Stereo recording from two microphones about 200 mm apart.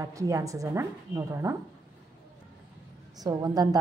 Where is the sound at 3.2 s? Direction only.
15° right (ahead or behind).